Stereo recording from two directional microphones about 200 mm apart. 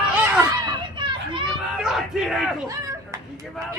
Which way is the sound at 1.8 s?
Centre (ahead or behind).